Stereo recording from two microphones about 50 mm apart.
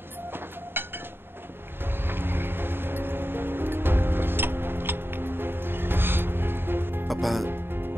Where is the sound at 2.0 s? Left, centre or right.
Right.